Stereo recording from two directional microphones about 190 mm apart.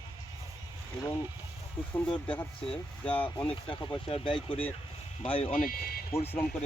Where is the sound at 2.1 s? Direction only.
5° left (ahead or behind).